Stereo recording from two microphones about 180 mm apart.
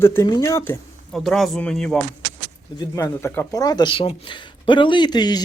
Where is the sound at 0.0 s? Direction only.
15° left (ahead or behind).